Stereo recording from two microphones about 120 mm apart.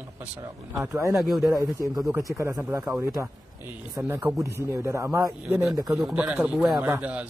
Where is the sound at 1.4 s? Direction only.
30° right (ahead or behind).